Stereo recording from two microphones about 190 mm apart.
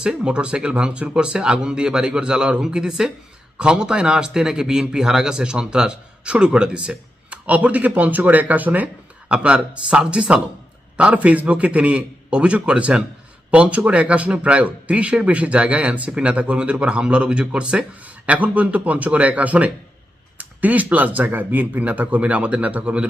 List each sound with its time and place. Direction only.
0.0 s a man's voice: 5° right (ahead or behind)